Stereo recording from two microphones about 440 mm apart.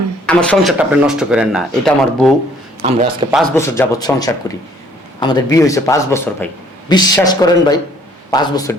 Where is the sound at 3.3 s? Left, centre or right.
Centre.